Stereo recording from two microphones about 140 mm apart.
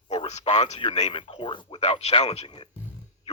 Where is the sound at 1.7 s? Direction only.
50° left (ahead or behind).